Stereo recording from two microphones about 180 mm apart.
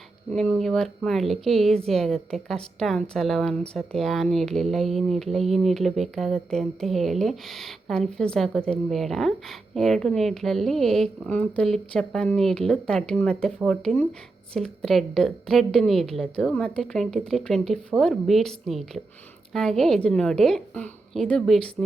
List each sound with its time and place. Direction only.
0.3 s speech: 5° left (ahead or behind)